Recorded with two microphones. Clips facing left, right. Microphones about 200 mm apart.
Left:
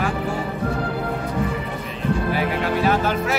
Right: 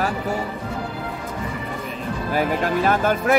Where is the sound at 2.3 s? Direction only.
45° right (ahead or behind).